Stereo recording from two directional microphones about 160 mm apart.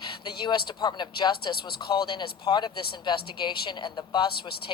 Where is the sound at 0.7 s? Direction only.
25° left (ahead or behind).